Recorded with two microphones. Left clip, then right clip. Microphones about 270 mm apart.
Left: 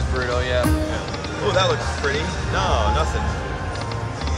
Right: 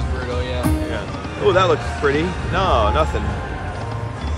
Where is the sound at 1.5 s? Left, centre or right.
Right.